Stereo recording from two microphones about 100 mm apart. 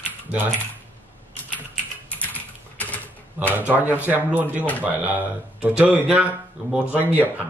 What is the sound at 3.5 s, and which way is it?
Speech, 20° right (ahead or behind).